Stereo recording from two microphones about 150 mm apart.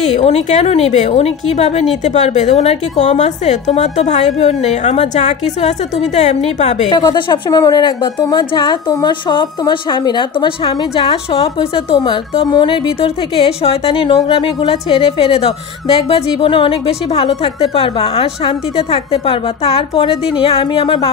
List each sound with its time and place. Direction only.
0.2 s a woman's voice: 45° left (ahead or behind)
6.9 s a woman's voice: 25° left (ahead or behind)